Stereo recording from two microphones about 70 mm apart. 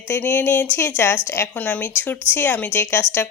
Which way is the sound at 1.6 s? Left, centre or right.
Left.